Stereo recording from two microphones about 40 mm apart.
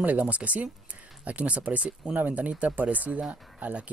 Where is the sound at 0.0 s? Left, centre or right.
Right.